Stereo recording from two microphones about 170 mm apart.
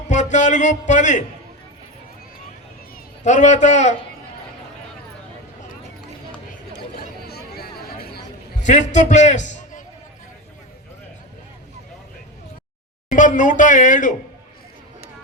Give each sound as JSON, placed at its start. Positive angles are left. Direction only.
{"t": 0.1, "sound": "a man's voice", "side_deg": 45}
{"t": 3.2, "sound": "speech", "side_deg": 45}
{"t": 6.9, "sound": "a sound", "side_deg": 65}
{"t": 8.6, "sound": "a man's voice", "side_deg": 45}
{"t": 13.1, "sound": "speech", "side_deg": 50}